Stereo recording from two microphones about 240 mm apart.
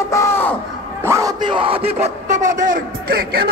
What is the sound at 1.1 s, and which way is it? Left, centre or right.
Speech, centre.